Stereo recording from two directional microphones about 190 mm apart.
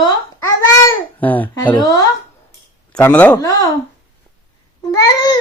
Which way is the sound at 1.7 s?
20° left (ahead or behind).